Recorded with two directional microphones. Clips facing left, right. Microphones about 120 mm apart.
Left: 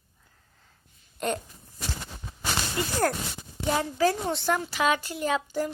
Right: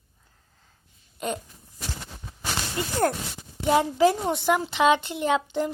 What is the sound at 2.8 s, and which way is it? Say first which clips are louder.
A woman's voice: right 2 dB; 25° right (ahead or behind).